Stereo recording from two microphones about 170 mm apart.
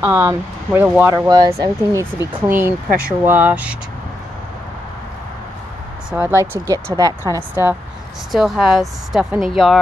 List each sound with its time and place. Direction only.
0.0 s speech: 15° right (ahead or behind)
1.1 s speech: 20° right (ahead or behind)
6.1 s speech: 15° right (ahead or behind)
8.3 s speech: centre (ahead or behind)